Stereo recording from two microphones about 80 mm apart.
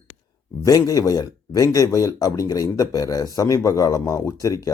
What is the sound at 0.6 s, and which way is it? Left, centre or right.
Speech, left.